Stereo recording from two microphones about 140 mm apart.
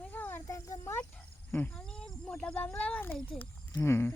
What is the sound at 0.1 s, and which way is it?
Snake, 15° left (ahead or behind).